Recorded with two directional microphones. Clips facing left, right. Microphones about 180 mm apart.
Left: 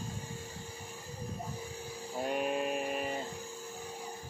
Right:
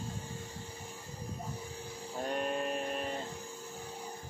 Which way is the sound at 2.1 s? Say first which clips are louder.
Left 2 dB; 5° left (ahead or behind).